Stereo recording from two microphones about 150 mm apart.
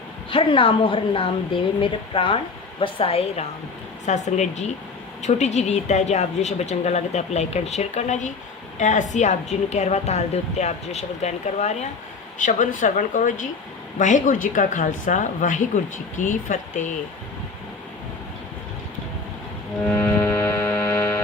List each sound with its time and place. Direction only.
0.3 s a woman's voice: 35° left (ahead or behind)
4.0 s a woman's voice: 50° left (ahead or behind)
19.8 s music: 10° left (ahead or behind)